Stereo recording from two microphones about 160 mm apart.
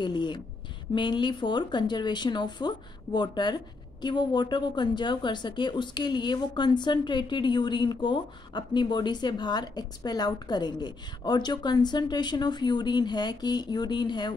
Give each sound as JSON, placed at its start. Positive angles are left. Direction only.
{"t": 0.0, "sound": "speech", "side_deg": 30}